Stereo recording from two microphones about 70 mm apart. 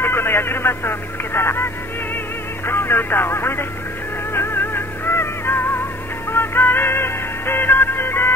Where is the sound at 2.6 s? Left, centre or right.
Left.